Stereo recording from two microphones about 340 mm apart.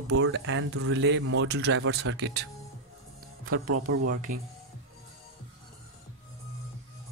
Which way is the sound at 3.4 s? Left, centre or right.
Right.